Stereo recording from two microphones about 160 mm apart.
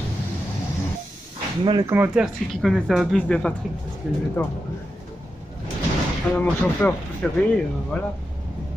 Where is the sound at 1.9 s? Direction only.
10° right (ahead or behind).